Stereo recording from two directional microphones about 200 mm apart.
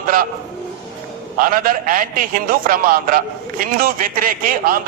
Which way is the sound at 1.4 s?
45° right (ahead or behind).